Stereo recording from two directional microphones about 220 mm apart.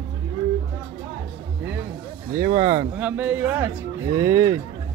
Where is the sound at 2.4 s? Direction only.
30° right (ahead or behind).